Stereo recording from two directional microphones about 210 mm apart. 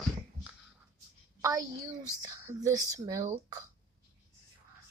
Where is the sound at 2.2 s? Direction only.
15° right (ahead or behind).